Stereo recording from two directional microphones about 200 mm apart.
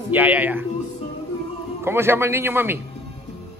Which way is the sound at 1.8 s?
10° right (ahead or behind).